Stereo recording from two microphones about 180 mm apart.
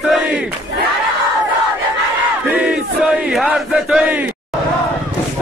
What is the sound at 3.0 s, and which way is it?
Battle cry, centre (ahead or behind).